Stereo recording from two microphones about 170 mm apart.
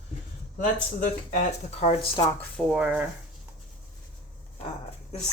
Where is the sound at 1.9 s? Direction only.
35° left (ahead or behind).